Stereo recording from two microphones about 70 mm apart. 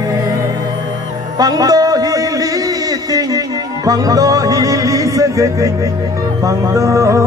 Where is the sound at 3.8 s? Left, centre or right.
Right.